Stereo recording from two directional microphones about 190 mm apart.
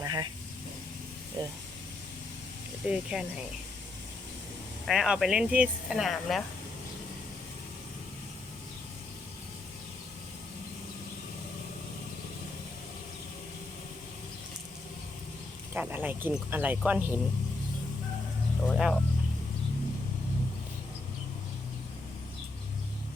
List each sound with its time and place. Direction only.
0.0 s vehicle: 20° right (ahead or behind)
1.4 s speech: 20° right (ahead or behind)
2.9 s speech: 5° right (ahead or behind)
4.9 s speech: 5° right (ahead or behind)
15.7 s speech: 10° right (ahead or behind)
18.7 s speech: centre (ahead or behind)